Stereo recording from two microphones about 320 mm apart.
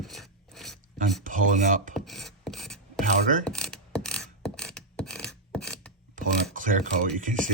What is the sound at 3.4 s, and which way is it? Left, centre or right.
Mechanisms, centre.